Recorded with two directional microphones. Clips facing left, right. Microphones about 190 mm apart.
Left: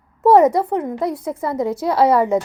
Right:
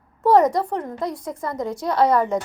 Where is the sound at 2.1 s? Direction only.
25° left (ahead or behind).